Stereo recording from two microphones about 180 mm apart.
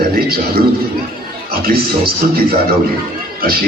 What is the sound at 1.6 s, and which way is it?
Speech, 55° right (ahead or behind).